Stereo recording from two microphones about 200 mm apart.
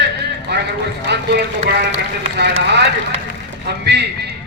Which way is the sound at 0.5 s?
60° right (ahead or behind).